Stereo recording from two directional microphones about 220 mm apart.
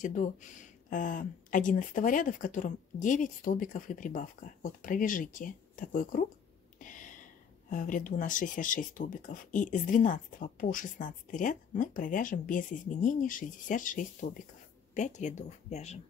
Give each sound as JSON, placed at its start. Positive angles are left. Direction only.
{"t": 0.0, "sound": "speech", "side_deg": 35}
{"t": 6.8, "sound": "a sound", "side_deg": 35}
{"t": 7.7, "sound": "speech", "side_deg": 35}